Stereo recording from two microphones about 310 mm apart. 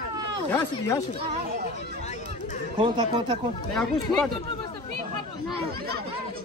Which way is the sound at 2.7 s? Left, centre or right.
Centre.